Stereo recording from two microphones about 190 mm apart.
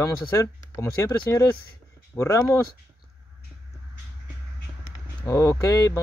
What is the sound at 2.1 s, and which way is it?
Speech, 15° left (ahead or behind).